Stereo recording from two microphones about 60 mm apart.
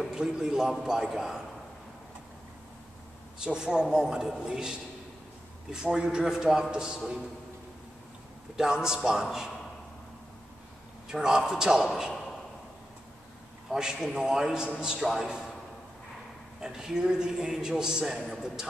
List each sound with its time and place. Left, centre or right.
0.0 s a man's voice: centre
3.4 s a man's voice: centre
8.5 s a man's voice: centre
11.1 s a man's voice: centre
13.7 s a man's voice: centre
16.5 s a man's voice: centre